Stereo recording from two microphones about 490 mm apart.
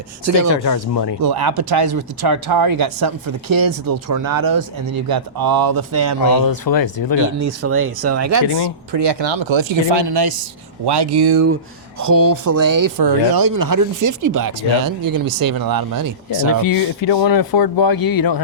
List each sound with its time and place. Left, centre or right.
0.3 s speech: right
0.6 s speech: left
1.2 s speech: right
6.3 s speech: left
6.7 s speech: left
7.2 s speech: right
8.9 s speech: right
11.9 s speech: right
16.6 s speech: left